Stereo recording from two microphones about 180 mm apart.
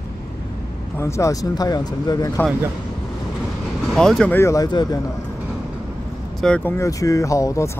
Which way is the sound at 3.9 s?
5° left (ahead or behind).